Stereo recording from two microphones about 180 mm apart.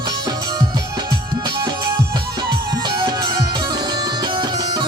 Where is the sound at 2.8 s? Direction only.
25° right (ahead or behind).